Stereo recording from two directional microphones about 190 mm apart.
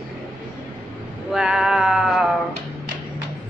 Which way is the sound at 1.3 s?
5° right (ahead or behind).